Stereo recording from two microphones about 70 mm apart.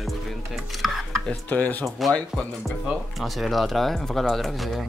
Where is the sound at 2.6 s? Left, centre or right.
Centre.